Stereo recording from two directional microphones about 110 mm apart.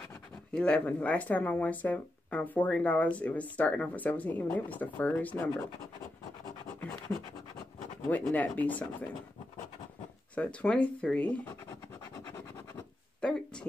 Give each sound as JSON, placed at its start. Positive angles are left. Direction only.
{"t": 0.5, "sound": "speech", "side_deg": 10}
{"t": 8.1, "sound": "speech", "side_deg": 15}
{"t": 10.3, "sound": "speech", "side_deg": 10}
{"t": 13.2, "sound": "a sound", "side_deg": 10}